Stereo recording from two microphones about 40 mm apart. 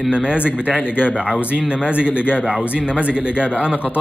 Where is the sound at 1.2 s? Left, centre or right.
Right.